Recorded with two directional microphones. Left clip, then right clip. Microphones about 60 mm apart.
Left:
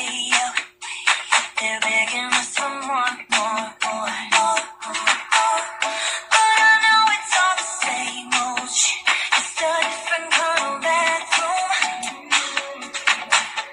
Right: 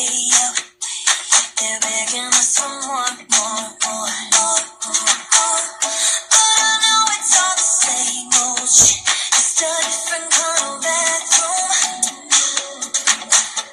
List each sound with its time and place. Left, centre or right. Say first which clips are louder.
0.3 s music: right 1 dB; right